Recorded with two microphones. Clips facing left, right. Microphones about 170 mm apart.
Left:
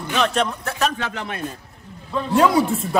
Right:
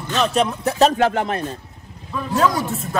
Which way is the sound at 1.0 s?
50° right (ahead or behind).